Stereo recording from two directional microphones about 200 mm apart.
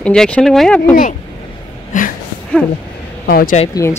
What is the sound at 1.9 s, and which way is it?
Speech, 40° left (ahead or behind).